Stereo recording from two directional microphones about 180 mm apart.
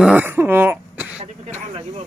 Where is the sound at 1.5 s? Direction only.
40° right (ahead or behind).